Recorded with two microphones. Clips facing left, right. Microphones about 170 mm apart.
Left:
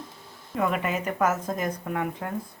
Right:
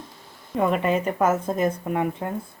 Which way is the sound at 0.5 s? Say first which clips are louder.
Right 5 dB; 30° right (ahead or behind).